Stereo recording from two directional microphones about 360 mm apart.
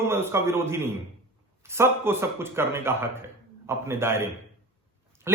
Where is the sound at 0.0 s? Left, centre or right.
Centre.